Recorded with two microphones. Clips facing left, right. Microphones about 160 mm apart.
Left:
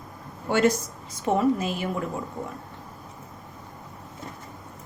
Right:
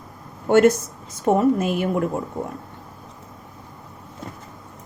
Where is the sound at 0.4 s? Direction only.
50° right (ahead or behind).